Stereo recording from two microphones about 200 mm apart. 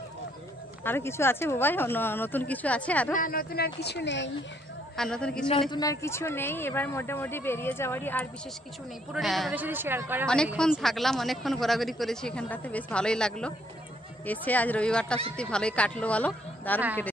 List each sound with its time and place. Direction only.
0.8 s speech: 10° left (ahead or behind)
3.2 s speech: 45° left (ahead or behind); by 4.3 s 60° left (ahead or behind)
4.9 s speech: 5° left (ahead or behind)
5.7 s a man's voice: 20° left (ahead or behind); by 10.2 s 10° right (ahead or behind)
10.2 s speech: 5° left (ahead or behind)